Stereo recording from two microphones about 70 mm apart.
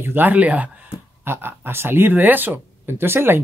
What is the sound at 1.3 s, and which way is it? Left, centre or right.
Speech, right.